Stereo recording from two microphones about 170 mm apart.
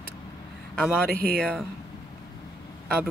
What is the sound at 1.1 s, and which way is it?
Speech, 60° right (ahead or behind).